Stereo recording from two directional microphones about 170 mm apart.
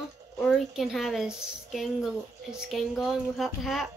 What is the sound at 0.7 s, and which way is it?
Speech, centre (ahead or behind).